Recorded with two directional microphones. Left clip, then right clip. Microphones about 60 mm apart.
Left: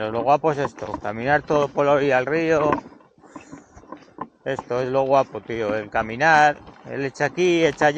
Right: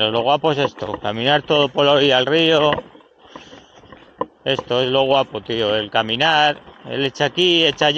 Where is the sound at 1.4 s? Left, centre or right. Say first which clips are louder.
Right 4 dB; centre.